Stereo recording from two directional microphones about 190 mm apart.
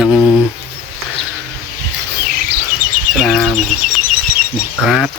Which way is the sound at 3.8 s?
45° right (ahead or behind).